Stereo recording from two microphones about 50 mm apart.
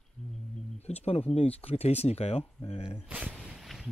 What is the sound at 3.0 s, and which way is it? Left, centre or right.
Speech, right.